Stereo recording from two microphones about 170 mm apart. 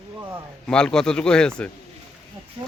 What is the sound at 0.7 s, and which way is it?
Speech, 5° left (ahead or behind).